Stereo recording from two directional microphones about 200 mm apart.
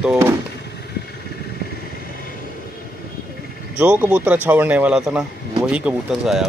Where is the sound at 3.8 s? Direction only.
5° right (ahead or behind).